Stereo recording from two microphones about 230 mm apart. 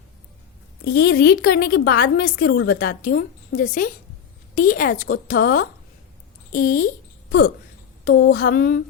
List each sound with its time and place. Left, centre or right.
0.9 s a woman's voice: left
6.8 s a sound: left
8.0 s a woman's voice: left